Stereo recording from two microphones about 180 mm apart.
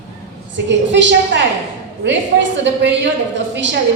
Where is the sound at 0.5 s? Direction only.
80° right.